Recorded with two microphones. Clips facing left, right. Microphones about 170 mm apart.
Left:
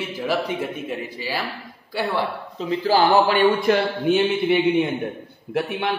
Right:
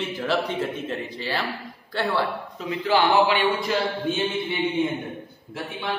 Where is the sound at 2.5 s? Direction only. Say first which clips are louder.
Left 3 dB; 30° left (ahead or behind); by 5.9 s 65° left (ahead or behind).